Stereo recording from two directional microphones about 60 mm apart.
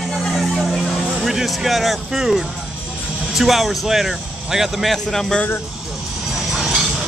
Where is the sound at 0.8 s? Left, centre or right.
Centre.